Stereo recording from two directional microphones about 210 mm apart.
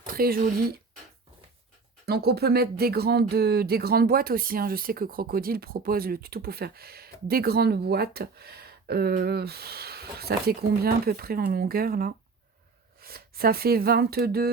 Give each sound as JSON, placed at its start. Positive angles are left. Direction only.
{"t": 0.0, "sound": "speech", "side_deg": -45}
{"t": 2.0, "sound": "speech", "side_deg": -50}